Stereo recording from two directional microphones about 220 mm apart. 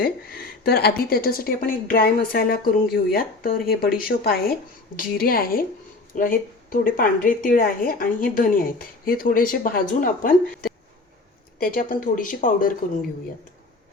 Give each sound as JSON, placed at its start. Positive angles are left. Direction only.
{"t": 0.0, "sound": "a woman's voice", "side_deg": 45}